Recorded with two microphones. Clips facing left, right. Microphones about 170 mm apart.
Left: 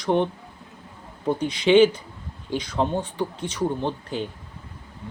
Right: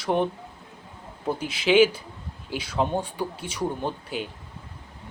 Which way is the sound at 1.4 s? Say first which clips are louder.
Left 3 dB; 5° right (ahead or behind).